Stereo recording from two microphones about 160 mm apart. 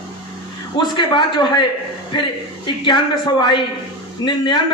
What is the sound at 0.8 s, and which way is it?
A man's voice, 30° left (ahead or behind).